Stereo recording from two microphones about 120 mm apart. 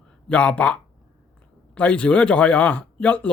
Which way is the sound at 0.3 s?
10° left (ahead or behind).